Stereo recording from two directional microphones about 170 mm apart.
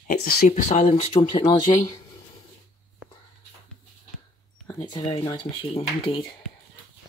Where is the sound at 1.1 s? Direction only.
25° left (ahead or behind).